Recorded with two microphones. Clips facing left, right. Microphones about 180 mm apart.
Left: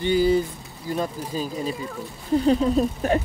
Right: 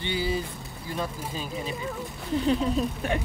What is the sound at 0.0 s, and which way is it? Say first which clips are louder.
Speech: left 9 dB; 45° left (ahead or behind).